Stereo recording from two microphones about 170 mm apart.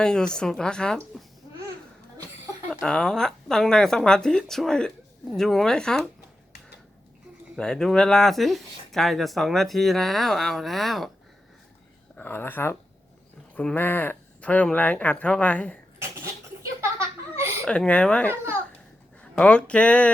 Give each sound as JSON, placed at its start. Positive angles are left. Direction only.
{"t": 0.0, "sound": "speech", "side_deg": 5}
{"t": 2.6, "sound": "speech", "side_deg": 5}
{"t": 7.5, "sound": "speech", "side_deg": 5}
{"t": 12.1, "sound": "speech", "side_deg": 10}
{"t": 17.7, "sound": "speech", "side_deg": 5}